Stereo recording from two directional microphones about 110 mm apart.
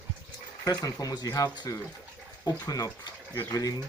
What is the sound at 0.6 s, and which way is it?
Speech, 30° left (ahead or behind).